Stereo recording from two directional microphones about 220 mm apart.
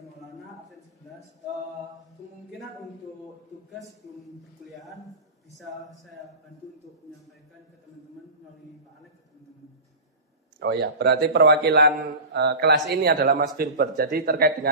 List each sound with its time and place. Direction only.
10.6 s speech: 50° right (ahead or behind)